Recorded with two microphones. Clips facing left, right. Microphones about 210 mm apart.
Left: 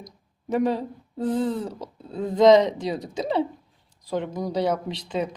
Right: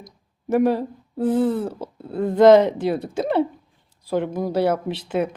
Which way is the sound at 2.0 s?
60° right (ahead or behind).